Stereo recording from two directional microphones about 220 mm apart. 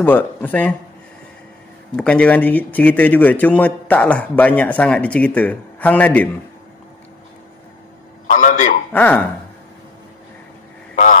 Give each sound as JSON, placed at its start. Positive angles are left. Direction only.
{"t": 0.0, "sound": "speech", "side_deg": 10}
{"t": 2.0, "sound": "speech", "side_deg": 5}
{"t": 8.3, "sound": "a sound", "side_deg": 35}
{"t": 8.9, "sound": "speech", "side_deg": 10}